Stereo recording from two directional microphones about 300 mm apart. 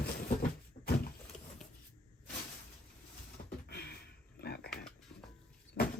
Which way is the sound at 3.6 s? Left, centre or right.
Left.